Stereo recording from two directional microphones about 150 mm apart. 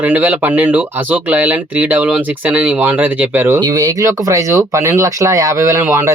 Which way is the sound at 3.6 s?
25° right (ahead or behind).